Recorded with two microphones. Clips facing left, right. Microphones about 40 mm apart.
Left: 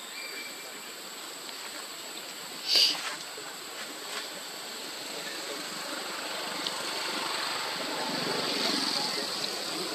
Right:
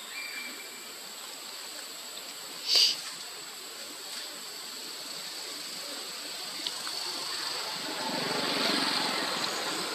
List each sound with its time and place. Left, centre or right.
2.7 s a sound: centre
5.5 s vehicle: left
8.0 s vehicle: centre
8.8 s vehicle: right
9.7 s stream: right